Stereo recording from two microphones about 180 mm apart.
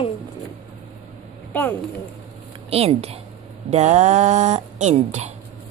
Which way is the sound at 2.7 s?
35° right (ahead or behind).